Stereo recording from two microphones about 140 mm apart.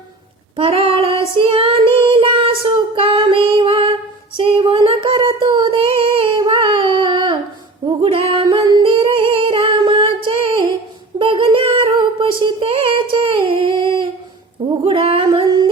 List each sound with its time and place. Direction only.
0.5 s female singing: 45° right (ahead or behind)
1.4 s child singing: 40° right (ahead or behind)
7.9 s female singing: 40° right (ahead or behind)
8.5 s singing: 35° right (ahead or behind)
11.2 s a sound: 40° right (ahead or behind)
14.8 s singing: 40° right (ahead or behind)